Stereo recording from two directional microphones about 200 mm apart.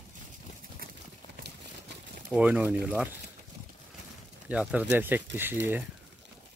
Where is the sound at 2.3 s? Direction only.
5° right (ahead or behind).